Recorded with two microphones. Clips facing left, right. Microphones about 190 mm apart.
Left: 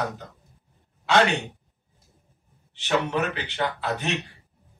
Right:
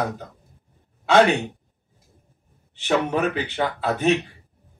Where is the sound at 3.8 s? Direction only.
55° right (ahead or behind).